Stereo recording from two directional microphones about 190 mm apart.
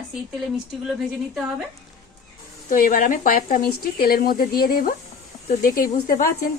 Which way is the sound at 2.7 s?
50° left (ahead or behind).